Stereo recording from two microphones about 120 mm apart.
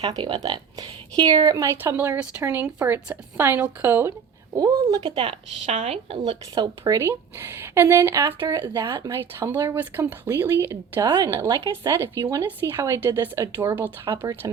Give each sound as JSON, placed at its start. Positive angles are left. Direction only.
{"t": 0.0, "sound": "speech", "side_deg": -40}
{"t": 4.5, "sound": "speech", "side_deg": -30}
{"t": 5.0, "sound": "speech", "side_deg": -50}
{"t": 5.6, "sound": "a woman's voice", "side_deg": -70}
{"t": 6.5, "sound": "speech", "side_deg": -30}
{"t": 7.0, "sound": "speech", "side_deg": -20}
{"t": 11.0, "sound": "speech", "side_deg": -30}